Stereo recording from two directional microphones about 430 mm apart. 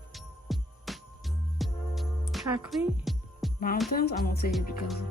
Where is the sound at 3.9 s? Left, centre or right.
Left.